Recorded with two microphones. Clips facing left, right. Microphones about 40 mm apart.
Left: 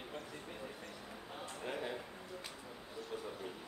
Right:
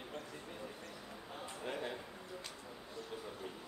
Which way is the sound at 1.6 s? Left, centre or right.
Centre.